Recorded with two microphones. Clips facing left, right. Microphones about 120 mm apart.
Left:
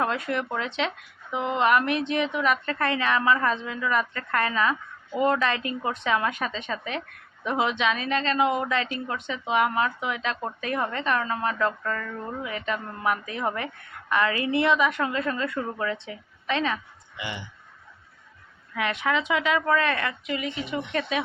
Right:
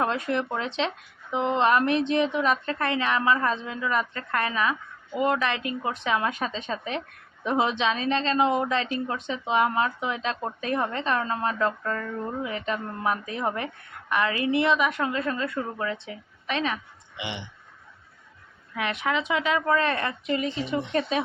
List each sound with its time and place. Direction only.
0.0 s a woman's voice: 25° right (ahead or behind)
19.0 s a woman's voice: 20° right (ahead or behind)
20.2 s speech: 35° right (ahead or behind)